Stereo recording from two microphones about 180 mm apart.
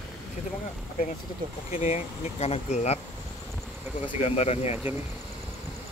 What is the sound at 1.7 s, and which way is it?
Speech, 35° left (ahead or behind).